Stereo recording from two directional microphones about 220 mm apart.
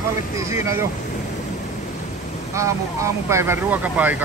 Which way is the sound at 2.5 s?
15° right (ahead or behind).